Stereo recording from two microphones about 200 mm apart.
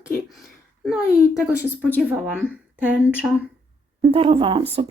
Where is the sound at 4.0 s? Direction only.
30° right (ahead or behind).